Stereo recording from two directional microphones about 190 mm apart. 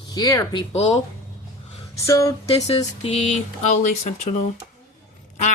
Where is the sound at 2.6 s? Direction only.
35° left (ahead or behind).